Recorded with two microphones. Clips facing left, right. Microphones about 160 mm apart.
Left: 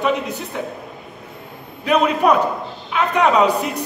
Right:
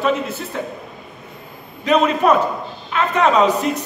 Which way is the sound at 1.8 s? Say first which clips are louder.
Right 1 dB; 10° left (ahead or behind).